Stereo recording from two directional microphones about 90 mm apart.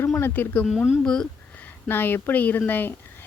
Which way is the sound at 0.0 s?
25° left (ahead or behind).